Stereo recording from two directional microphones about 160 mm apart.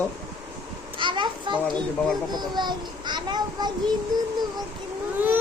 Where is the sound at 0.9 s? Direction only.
30° right (ahead or behind).